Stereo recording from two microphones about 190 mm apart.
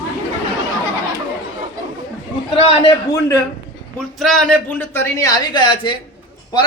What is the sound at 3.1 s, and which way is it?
Speech, 15° left (ahead or behind).